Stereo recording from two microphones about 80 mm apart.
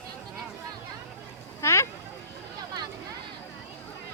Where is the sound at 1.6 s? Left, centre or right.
Left.